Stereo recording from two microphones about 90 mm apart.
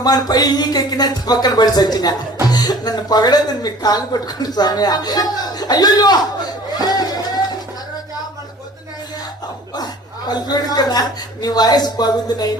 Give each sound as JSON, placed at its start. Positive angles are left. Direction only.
{"t": 0.0, "sound": "speech", "side_deg": 50}
{"t": 9.7, "sound": "speech", "side_deg": 50}